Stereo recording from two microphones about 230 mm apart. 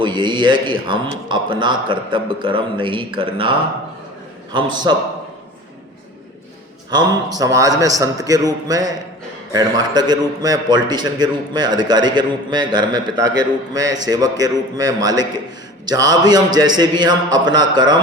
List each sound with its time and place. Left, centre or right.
0.0 s a man's voice: centre
4.9 s a man's voice: centre
7.3 s a man's voice: centre